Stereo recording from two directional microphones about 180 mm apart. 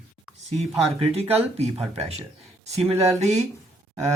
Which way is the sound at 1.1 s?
35° right (ahead or behind).